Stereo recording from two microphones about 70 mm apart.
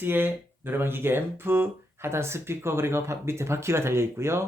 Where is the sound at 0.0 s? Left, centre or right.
Right.